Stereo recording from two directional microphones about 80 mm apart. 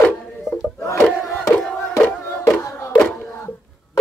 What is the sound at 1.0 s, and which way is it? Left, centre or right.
Crowd, centre.